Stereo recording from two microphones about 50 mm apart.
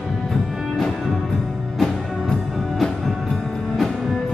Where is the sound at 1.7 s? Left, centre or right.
Centre.